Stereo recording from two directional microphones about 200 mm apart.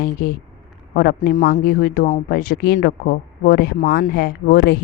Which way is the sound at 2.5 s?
55° left (ahead or behind).